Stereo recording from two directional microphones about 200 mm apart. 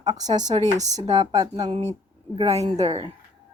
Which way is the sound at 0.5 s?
35° right (ahead or behind).